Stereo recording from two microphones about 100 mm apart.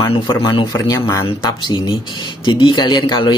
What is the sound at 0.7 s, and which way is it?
Speech, 35° left (ahead or behind).